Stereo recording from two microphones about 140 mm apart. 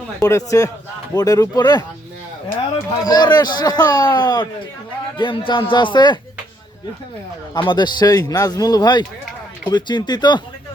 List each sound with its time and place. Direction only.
0.2 s a man's voice: 25° left (ahead or behind)
3.0 s a man's voice: 30° left (ahead or behind)
7.5 s a man's voice: 35° left (ahead or behind)